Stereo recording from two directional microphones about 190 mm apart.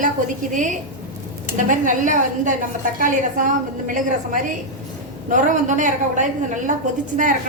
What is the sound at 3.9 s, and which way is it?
A woman's voice, 45° right (ahead or behind).